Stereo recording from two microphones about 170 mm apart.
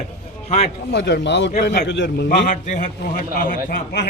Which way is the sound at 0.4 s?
40° left (ahead or behind).